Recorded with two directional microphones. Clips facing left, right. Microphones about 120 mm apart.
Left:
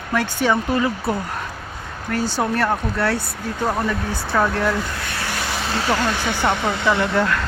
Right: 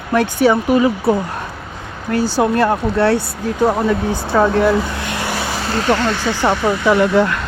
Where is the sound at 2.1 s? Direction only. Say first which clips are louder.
Right 6 dB; 10° right (ahead or behind).